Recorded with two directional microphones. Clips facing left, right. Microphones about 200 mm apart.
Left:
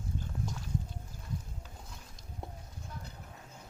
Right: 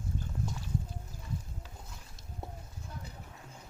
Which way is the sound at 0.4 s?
Centre (ahead or behind).